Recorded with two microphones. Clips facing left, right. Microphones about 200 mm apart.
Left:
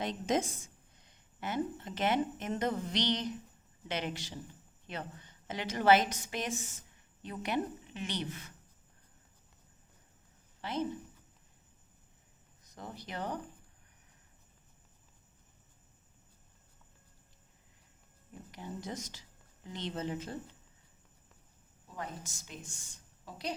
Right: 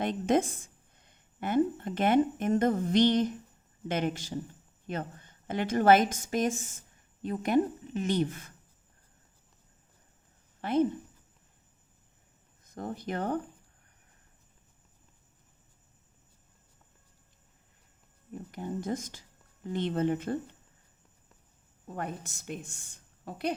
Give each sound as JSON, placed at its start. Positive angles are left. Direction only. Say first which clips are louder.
{"t": 0.0, "sound": "a woman's voice", "louder": "right 6 dB", "side_deg": -55}
{"t": 10.6, "sound": "a woman's voice", "louder": "right 9 dB", "side_deg": -55}
{"t": 12.6, "sound": "speech", "louder": "right 10 dB", "side_deg": -50}
{"t": 18.5, "sound": "a woman's voice", "louder": "right 8 dB", "side_deg": -50}
{"t": 21.8, "sound": "a woman's voice", "louder": "right 6 dB", "side_deg": -60}